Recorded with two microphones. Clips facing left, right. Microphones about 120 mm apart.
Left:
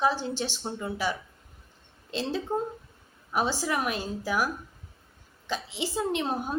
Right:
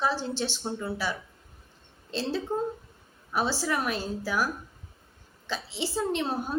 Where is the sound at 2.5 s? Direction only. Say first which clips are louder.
Even; 15° left (ahead or behind).